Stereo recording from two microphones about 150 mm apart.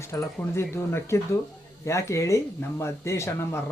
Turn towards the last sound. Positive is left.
turn(degrees=15)  # may be behind; listen again after turning